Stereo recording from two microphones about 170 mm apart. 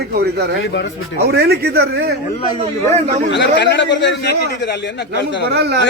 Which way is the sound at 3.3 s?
90° left.